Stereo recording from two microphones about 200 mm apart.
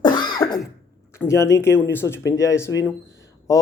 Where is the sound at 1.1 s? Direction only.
15° left (ahead or behind).